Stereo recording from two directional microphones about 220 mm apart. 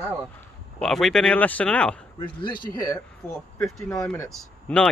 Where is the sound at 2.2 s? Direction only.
20° left (ahead or behind).